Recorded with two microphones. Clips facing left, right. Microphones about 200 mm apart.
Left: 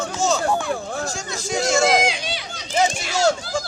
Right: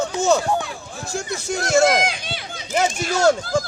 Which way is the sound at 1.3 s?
60° right (ahead or behind).